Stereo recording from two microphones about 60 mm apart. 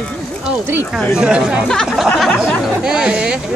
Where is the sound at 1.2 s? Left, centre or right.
Centre.